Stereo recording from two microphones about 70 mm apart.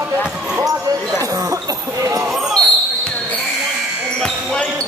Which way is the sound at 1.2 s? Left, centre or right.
Right.